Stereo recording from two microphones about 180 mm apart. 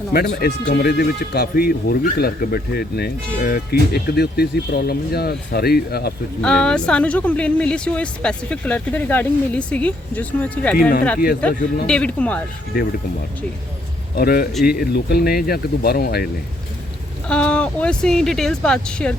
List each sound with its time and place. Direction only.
0.1 s speech: 60° left (ahead or behind)
6.4 s speech: 5° left (ahead or behind)
14.2 s speech: 55° left (ahead or behind)
17.2 s speech: 5° left (ahead or behind)